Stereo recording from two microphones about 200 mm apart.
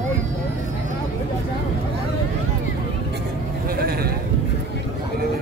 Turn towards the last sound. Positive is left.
turn(degrees=-50)  # may be behind; listen again after turning